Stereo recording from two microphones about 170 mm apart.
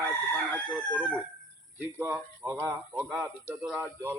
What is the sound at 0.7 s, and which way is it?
Speech, 10° right (ahead or behind).